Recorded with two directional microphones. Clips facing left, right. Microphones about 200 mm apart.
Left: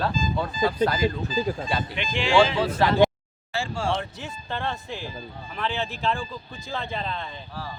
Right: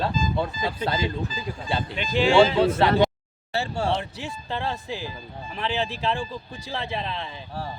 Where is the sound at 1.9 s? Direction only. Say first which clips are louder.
Right 3 dB; 40° right (ahead or behind).